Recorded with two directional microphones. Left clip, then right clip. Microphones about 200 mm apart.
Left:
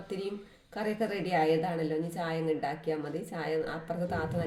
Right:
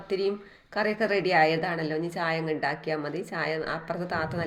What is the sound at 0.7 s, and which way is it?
A woman's voice, 20° right (ahead or behind).